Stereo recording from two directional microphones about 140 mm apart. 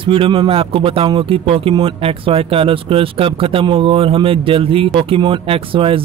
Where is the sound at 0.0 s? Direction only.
40° right (ahead or behind).